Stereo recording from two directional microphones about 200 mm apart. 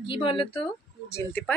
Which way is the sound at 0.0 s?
25° left (ahead or behind).